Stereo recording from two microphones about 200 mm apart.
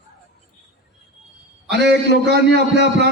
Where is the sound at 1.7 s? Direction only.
55° right (ahead or behind).